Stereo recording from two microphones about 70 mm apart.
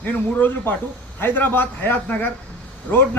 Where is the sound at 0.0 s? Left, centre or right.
Left.